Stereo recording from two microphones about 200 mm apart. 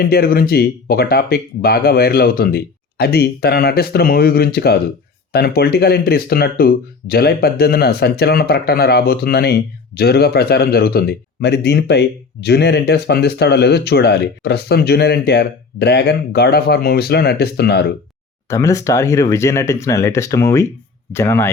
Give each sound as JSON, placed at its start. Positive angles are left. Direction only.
{"t": 0.0, "sound": "speech", "side_deg": 50}
{"t": 18.4, "sound": "speech", "side_deg": 15}